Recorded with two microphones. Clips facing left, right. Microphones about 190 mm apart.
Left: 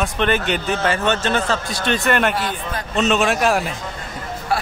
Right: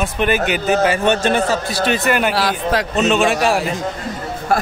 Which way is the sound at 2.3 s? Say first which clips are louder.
Right 7 dB; 80° right.